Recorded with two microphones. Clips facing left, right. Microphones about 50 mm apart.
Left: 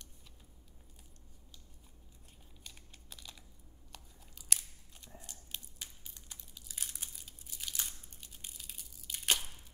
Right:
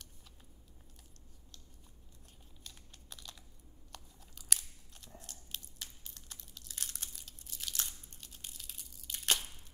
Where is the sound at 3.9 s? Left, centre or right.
Centre.